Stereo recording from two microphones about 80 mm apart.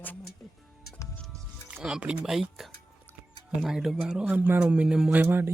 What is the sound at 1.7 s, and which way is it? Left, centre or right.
Speech, centre.